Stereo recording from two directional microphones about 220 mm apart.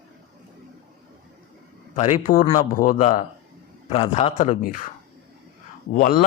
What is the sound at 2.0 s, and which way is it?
A man's voice, 35° left (ahead or behind).